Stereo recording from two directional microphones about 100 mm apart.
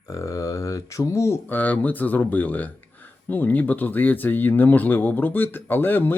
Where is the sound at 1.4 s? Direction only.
15° left (ahead or behind).